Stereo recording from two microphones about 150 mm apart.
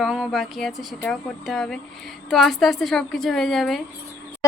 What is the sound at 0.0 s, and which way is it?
Speech, centre (ahead or behind).